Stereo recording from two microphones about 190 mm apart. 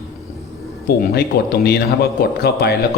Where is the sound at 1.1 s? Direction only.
55° left (ahead or behind).